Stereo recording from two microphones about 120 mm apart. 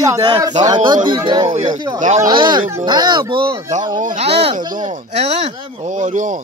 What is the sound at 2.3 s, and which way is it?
Speech, 40° right (ahead or behind).